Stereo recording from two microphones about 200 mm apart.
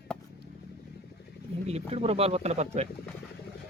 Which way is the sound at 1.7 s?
30° right (ahead or behind).